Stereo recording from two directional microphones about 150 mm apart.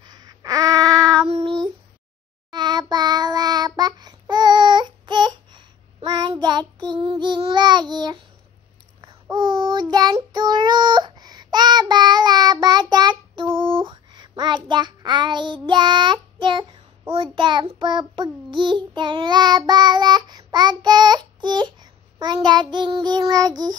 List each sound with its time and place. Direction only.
0.0 s a sound: 25° right (ahead or behind)
1.0 s child singing: 5° left (ahead or behind)
2.5 s child singing: 30° right (ahead or behind)
9.3 s child singing: 30° right (ahead or behind)